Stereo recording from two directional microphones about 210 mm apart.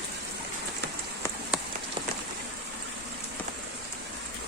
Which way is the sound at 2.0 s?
25° right (ahead or behind).